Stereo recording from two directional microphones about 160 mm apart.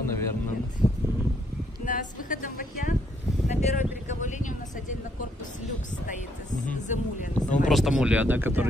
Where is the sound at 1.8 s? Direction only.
55° left (ahead or behind).